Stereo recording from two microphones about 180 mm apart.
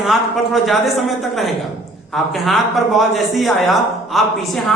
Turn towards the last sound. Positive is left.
turn(degrees=0)  # may be behind; listen again after turning